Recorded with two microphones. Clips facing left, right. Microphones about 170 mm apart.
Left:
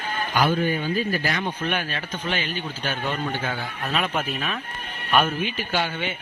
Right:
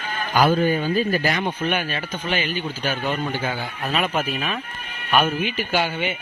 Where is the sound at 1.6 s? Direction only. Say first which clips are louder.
Right 3 dB; 5° right (ahead or behind).